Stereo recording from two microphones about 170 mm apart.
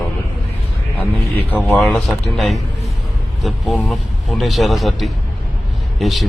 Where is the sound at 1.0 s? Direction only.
10° left (ahead or behind).